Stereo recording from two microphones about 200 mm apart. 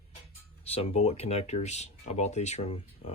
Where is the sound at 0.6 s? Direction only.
30° left (ahead or behind).